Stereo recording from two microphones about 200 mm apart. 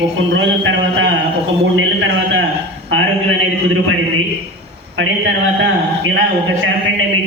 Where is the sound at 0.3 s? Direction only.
65° right (ahead or behind).